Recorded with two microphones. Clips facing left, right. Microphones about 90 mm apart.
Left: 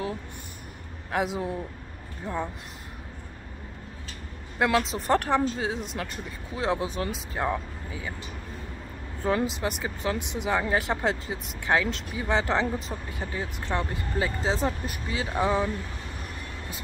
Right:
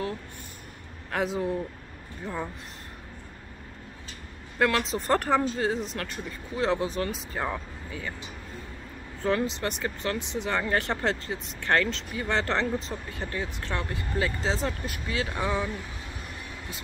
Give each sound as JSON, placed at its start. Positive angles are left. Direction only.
{"t": 1.1, "sound": "speech", "side_deg": 10}
{"t": 4.6, "sound": "speech", "side_deg": 15}
{"t": 4.9, "sound": "speech", "side_deg": 5}
{"t": 9.2, "sound": "speech", "side_deg": 15}